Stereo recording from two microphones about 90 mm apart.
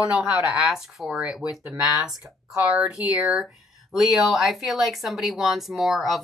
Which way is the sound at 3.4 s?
Centre (ahead or behind).